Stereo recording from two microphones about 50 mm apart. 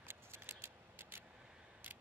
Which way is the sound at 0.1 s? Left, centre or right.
Right.